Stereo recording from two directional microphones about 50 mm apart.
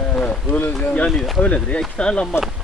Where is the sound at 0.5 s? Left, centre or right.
Left.